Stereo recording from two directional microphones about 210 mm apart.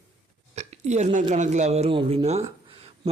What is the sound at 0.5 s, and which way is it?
Hiccup, 35° right (ahead or behind).